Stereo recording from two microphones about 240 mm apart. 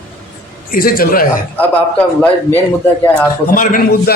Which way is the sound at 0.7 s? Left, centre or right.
Left.